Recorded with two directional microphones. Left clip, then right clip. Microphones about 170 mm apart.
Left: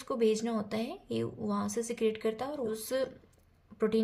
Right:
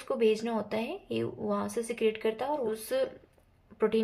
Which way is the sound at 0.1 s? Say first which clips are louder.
Right 2 dB; 25° left (ahead or behind).